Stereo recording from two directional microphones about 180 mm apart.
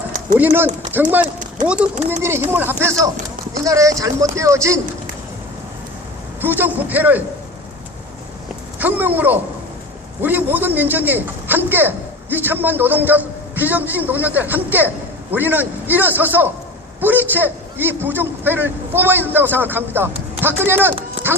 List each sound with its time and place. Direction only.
0.3 s a man's voice: 10° right (ahead or behind)
6.4 s a man's voice: 10° right (ahead or behind)
8.8 s a man's voice: 10° right (ahead or behind)